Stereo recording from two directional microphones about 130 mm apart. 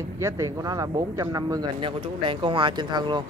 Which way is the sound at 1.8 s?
40° right (ahead or behind).